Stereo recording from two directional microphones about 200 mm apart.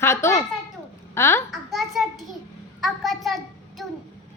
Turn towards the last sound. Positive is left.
turn(degrees=0)  # may be behind; listen again after turning